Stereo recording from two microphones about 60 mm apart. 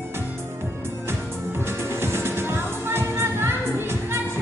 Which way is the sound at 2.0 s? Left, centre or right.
Right.